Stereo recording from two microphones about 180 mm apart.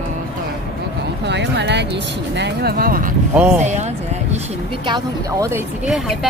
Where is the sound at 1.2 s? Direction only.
70° right (ahead or behind); by 3.1 s 55° right (ahead or behind).